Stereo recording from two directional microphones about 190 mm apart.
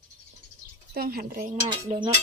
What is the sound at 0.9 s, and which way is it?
Speech, 50° right (ahead or behind).